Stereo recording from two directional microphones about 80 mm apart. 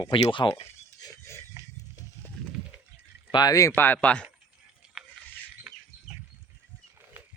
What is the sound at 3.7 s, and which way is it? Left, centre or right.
Speech, left.